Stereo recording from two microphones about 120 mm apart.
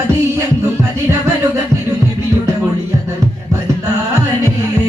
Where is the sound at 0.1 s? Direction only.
25° right (ahead or behind).